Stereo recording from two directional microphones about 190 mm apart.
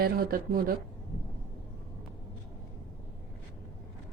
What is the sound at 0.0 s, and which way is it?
Speech, 50° right (ahead or behind).